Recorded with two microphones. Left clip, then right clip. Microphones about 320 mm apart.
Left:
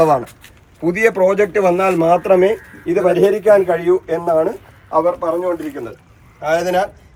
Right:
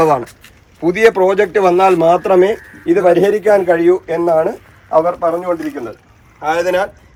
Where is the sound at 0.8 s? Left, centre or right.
Right.